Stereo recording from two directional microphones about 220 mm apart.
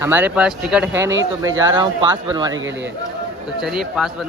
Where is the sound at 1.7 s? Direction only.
20° right (ahead or behind).